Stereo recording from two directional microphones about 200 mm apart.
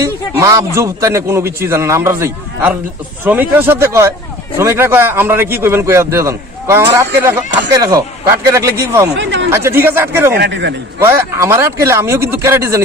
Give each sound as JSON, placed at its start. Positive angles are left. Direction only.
{"t": 0.0, "sound": "a man's voice", "side_deg": -15}
{"t": 9.1, "sound": "chatter", "side_deg": -65}
{"t": 9.5, "sound": "a man's voice", "side_deg": -10}
{"t": 10.3, "sound": "a man's voice", "side_deg": -60}
{"t": 11.0, "sound": "a man's voice", "side_deg": -10}